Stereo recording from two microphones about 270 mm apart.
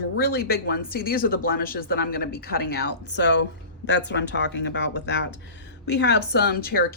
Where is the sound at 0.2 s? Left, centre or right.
Left.